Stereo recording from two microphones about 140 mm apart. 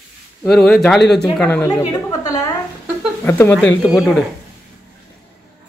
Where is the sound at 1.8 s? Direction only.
25° left (ahead or behind).